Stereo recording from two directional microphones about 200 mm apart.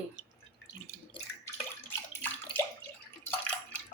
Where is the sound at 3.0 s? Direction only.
5° left (ahead or behind).